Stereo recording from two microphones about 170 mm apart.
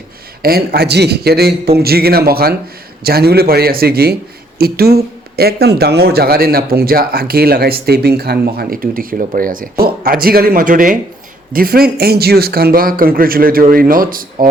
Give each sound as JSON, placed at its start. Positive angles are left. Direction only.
{"t": 0.4, "sound": "a man's voice", "side_deg": -65}